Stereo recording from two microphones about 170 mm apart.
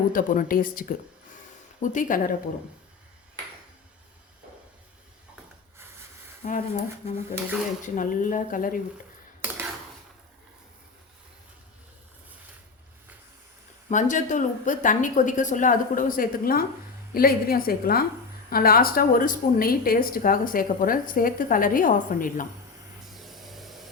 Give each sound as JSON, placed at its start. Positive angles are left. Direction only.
{"t": 0.1, "sound": "a woman's voice", "side_deg": 55}
{"t": 6.4, "sound": "a woman's voice", "side_deg": 45}
{"t": 13.9, "sound": "a woman's voice", "side_deg": 45}
{"t": 23.1, "sound": "vehicle", "side_deg": 0}